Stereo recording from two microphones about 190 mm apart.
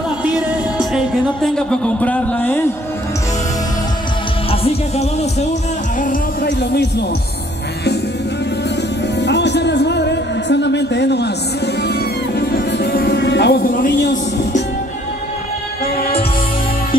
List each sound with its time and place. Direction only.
0.7 s speech: centre (ahead or behind)
4.5 s music: 35° left (ahead or behind)
6.6 s speech: 60° left (ahead or behind)
9.2 s music: 65° left (ahead or behind)